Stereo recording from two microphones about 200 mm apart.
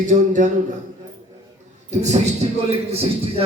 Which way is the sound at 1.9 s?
35° right (ahead or behind).